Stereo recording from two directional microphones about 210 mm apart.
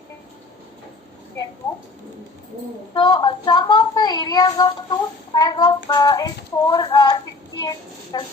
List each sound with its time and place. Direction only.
2.9 s a woman's voice: 20° left (ahead or behind)